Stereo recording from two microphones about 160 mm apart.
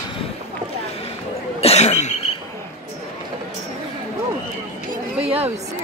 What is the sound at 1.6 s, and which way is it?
Cough, 40° left (ahead or behind).